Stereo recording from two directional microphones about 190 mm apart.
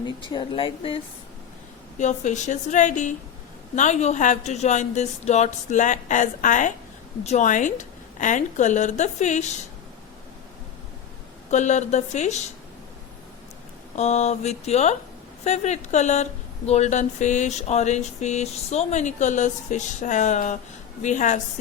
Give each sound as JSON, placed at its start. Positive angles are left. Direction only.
{"t": 0.0, "sound": "speech", "side_deg": 25}
{"t": 2.0, "sound": "a woman's voice", "side_deg": 40}
{"t": 11.5, "sound": "a woman's voice", "side_deg": 40}
{"t": 13.9, "sound": "a woman's voice", "side_deg": 35}